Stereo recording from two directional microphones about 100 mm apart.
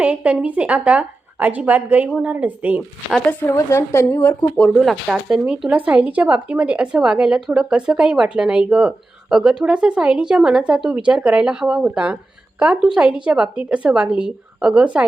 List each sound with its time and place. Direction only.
0.0 s speech: 15° right (ahead or behind)
3.5 s a woman's voice: 30° left (ahead or behind)
4.2 s speech: 15° left (ahead or behind)
4.7 s speech: centre (ahead or behind)
5.3 s speech: 10° right (ahead or behind)